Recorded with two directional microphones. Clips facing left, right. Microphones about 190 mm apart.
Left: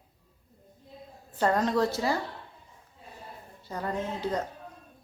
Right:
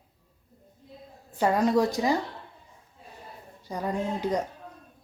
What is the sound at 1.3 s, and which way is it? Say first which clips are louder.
Speech: right 3 dB; 10° right (ahead or behind).